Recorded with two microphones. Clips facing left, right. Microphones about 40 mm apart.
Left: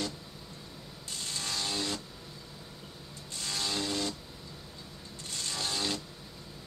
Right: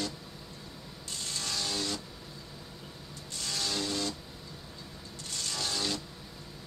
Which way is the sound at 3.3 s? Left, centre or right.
Centre.